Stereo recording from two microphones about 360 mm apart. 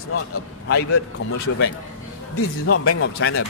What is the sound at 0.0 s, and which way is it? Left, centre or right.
Speech, left.